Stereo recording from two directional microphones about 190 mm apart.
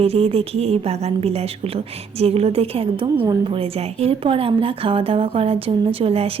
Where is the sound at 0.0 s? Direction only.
30° right (ahead or behind).